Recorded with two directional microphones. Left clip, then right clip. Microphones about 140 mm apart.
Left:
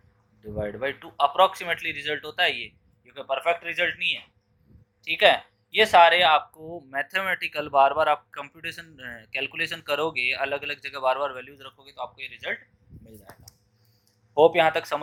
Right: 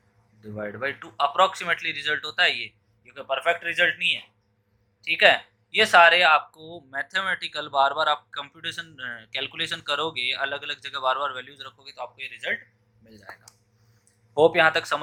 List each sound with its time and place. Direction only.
0.4 s speech: 5° left (ahead or behind)
14.3 s speech: centre (ahead or behind)